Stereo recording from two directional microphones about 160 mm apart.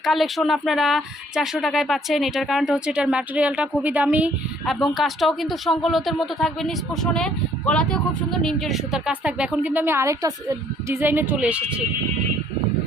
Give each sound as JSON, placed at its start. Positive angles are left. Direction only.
{"t": 0.0, "sound": "speech", "side_deg": 0}